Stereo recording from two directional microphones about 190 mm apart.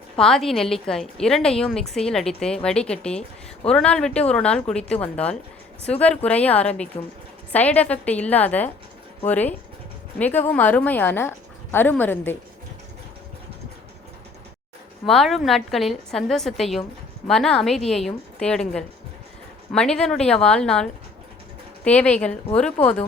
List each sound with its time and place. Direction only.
0.2 s a woman's voice: centre (ahead or behind)
6.9 s speech: 35° left (ahead or behind)
7.5 s a woman's voice: 10° left (ahead or behind)
15.0 s a woman's voice: centre (ahead or behind)
19.7 s a woman's voice: 5° left (ahead or behind)